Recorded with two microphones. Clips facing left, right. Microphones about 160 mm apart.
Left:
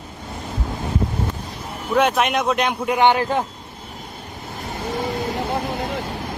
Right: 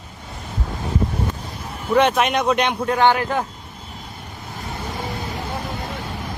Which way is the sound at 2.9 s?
20° left (ahead or behind).